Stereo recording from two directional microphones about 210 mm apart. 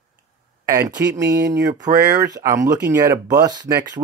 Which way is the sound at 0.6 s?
15° right (ahead or behind).